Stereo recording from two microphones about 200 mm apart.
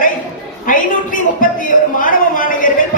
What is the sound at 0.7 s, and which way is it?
Speech, 40° left (ahead or behind).